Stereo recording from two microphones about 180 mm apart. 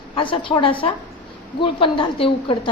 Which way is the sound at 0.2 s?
25° left (ahead or behind).